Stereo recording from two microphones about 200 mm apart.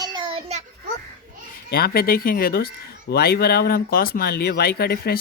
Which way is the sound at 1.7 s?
50° left (ahead or behind).